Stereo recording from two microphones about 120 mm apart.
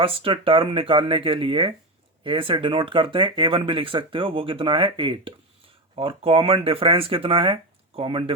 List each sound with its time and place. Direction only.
0.0 s speech: 50° right (ahead or behind)